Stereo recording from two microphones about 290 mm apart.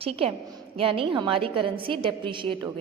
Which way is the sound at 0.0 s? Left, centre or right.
Centre.